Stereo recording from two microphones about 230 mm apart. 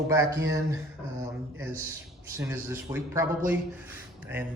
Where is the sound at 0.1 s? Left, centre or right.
Centre.